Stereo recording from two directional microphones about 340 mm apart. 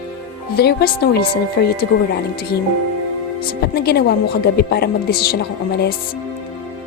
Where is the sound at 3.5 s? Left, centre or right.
Left.